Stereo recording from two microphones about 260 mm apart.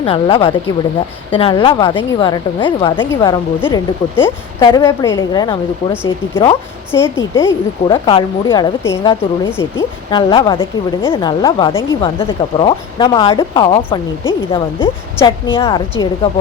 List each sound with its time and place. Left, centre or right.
0.0 s a woman's voice: left